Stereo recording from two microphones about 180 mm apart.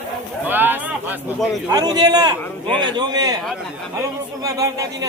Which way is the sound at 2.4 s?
10° left (ahead or behind).